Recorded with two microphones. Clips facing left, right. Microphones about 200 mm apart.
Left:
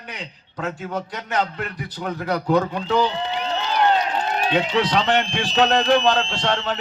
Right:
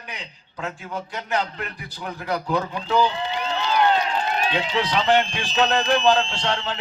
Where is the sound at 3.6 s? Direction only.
45° left (ahead or behind).